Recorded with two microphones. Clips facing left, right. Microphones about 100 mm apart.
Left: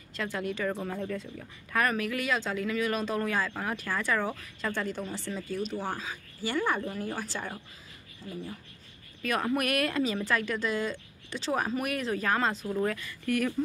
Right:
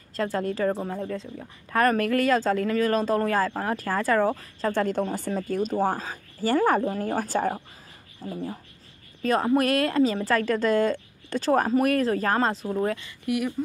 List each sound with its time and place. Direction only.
0.1 s speech: 35° right (ahead or behind)
1.8 s speech: 45° right (ahead or behind)
4.7 s speech: 45° right (ahead or behind)
12.7 s speech: 25° right (ahead or behind)
13.2 s speech: 15° right (ahead or behind)